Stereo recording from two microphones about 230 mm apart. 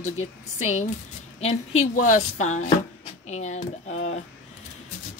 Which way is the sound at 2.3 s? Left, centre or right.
Left.